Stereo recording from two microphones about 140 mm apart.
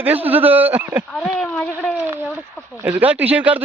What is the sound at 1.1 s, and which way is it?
Speech, 5° left (ahead or behind).